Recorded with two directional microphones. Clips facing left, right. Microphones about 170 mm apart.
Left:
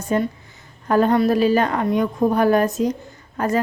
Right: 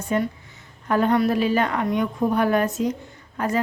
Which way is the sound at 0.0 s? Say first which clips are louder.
Left 3 dB; 35° left (ahead or behind).